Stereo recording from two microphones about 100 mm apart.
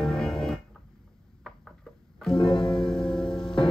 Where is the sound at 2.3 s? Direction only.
50° left (ahead or behind).